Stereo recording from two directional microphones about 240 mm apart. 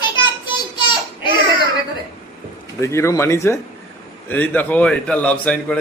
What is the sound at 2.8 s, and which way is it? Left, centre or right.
A man's voice, centre.